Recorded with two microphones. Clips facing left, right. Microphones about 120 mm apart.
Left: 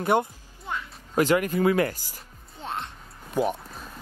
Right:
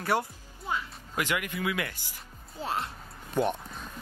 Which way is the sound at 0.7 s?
5° right (ahead or behind).